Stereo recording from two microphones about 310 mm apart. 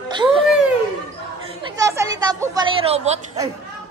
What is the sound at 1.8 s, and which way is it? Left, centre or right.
A woman's voice, centre.